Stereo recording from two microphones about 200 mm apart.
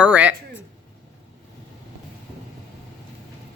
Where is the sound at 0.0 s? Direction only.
5° right (ahead or behind).